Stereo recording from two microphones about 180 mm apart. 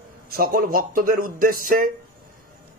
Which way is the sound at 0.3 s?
55° right (ahead or behind).